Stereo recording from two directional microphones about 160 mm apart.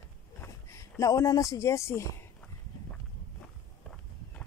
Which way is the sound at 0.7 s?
20° left (ahead or behind).